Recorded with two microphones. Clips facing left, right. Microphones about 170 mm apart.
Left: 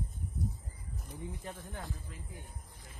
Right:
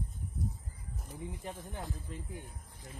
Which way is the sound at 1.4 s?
15° right (ahead or behind).